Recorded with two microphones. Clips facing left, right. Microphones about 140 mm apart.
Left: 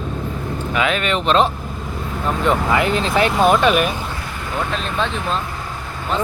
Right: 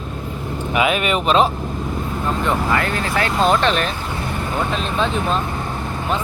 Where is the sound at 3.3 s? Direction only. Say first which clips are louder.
Left 1 dB; 5° left (ahead or behind).